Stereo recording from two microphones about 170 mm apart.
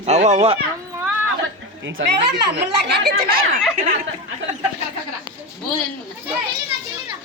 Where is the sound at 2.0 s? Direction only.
90° right.